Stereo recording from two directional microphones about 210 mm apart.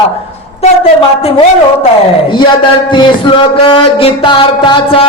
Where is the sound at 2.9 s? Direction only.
25° left (ahead or behind).